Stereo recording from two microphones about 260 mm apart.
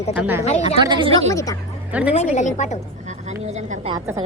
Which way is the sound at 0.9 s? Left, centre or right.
Centre.